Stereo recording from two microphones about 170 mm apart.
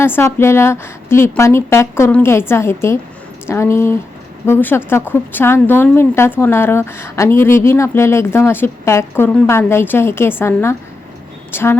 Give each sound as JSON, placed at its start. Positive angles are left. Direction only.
{"t": 0.0, "sound": "a woman's voice", "side_deg": 15}